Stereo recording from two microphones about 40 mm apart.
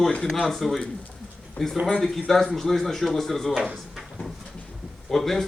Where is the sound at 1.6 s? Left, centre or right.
Left.